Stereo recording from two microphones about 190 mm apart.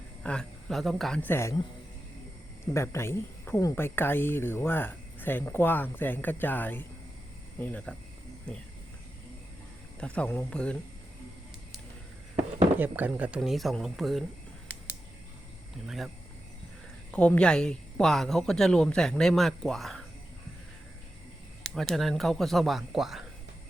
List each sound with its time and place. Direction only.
0.2 s speech: 5° left (ahead or behind)
2.7 s speech: 15° left (ahead or behind)
10.0 s speech: 5° left (ahead or behind)
12.8 s speech: 10° right (ahead or behind)
17.1 s speech: 5° left (ahead or behind)
21.8 s speech: centre (ahead or behind)